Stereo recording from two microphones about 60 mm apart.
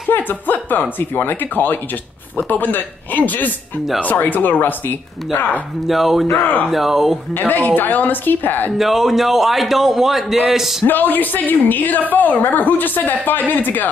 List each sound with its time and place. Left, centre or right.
0.1 s a woman's voice: left
5.9 s a man's voice: centre
7.3 s a woman's voice: left
8.7 s a man's voice: centre
10.9 s a woman's voice: left